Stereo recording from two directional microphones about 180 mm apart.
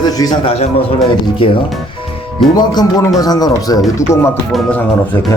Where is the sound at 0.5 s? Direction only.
35° left (ahead or behind).